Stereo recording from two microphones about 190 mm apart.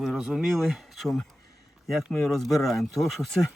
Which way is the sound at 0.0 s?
Centre (ahead or behind).